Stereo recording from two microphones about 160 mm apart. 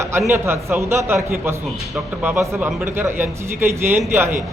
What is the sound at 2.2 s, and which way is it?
A man's voice, 15° right (ahead or behind).